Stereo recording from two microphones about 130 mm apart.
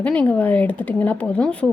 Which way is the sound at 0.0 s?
10° left (ahead or behind).